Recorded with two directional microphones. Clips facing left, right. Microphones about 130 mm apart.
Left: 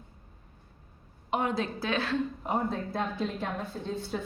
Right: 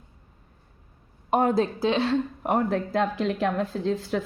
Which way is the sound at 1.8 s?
30° right (ahead or behind).